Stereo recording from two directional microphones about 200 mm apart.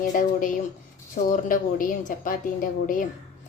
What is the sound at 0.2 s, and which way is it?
A woman's voice, 40° left (ahead or behind).